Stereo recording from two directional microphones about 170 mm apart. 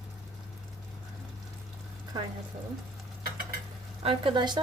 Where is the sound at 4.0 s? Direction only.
30° right (ahead or behind).